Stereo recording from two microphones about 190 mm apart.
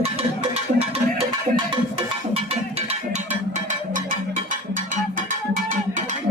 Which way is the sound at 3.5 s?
45° right (ahead or behind).